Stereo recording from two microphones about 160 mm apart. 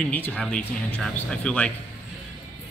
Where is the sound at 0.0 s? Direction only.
10° left (ahead or behind).